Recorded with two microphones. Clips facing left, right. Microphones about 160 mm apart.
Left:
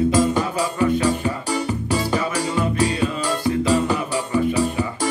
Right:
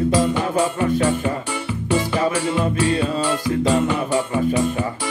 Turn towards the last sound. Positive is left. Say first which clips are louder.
# even
turn(degrees=35)  # may be behind; listen again after turning